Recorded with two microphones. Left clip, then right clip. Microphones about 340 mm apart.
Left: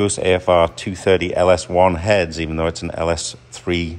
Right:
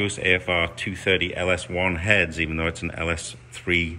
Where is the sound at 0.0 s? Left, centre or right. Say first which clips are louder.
Left 5 dB; centre.